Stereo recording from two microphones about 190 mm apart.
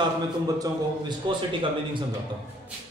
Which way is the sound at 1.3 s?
25° right (ahead or behind).